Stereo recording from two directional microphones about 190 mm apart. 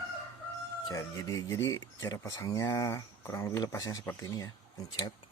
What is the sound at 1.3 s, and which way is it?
Speech, 15° left (ahead or behind).